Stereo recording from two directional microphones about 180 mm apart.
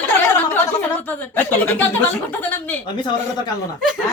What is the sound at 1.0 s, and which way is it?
A woman's voice, 10° left (ahead or behind).